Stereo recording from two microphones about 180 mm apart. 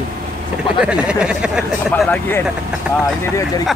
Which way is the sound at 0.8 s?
5° right (ahead or behind).